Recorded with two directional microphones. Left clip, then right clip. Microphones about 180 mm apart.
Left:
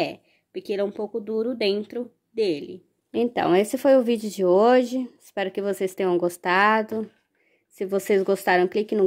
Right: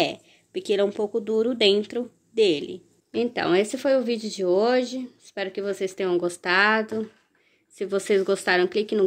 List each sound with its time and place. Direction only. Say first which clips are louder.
0.0 s speech: right 2 dB; 10° left (ahead or behind)
3.1 s speech: left 2 dB; 30° left (ahead or behind)